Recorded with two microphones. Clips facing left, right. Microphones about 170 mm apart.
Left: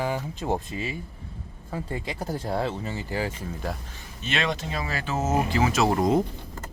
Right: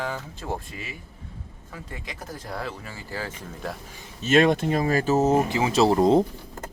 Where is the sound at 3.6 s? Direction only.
Centre (ahead or behind).